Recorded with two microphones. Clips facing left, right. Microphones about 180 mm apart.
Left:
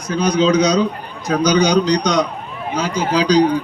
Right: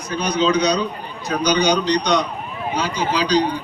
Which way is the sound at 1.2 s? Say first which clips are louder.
Left 3 dB; 90° left.